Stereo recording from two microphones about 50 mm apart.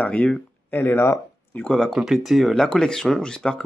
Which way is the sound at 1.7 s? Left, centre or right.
Centre.